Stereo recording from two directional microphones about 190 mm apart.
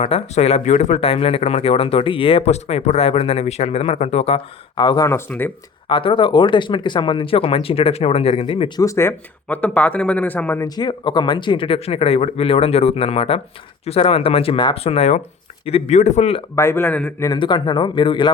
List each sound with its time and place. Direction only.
0.0 s speech: 30° left (ahead or behind); by 5.5 s 10° left (ahead or behind)
5.9 s speech: 25° left (ahead or behind)
8.8 s speech: 15° left (ahead or behind)
10.8 s speech: 25° left (ahead or behind)
16.6 s speech: 10° left (ahead or behind)
17.3 s speech: 25° left (ahead or behind)